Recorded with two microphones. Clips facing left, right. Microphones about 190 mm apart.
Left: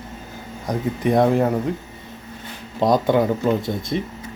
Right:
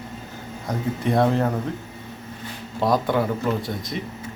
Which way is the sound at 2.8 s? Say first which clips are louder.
Left 4 dB; 20° left (ahead or behind).